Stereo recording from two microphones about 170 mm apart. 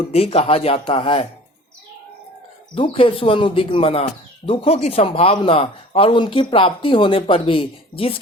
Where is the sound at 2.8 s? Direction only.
30° left (ahead or behind).